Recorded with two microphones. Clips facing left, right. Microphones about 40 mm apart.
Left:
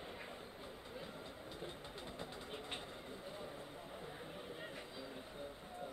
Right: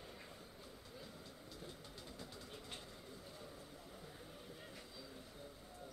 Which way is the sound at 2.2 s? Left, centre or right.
Left.